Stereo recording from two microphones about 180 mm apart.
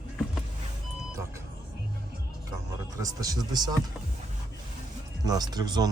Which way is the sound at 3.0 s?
20° right (ahead or behind).